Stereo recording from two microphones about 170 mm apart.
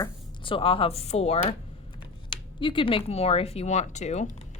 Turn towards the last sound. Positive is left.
turn(degrees=45)  # may be behind; listen again after turning